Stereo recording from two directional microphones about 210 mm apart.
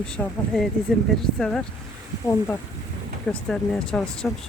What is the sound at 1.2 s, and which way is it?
Speech, 5° left (ahead or behind).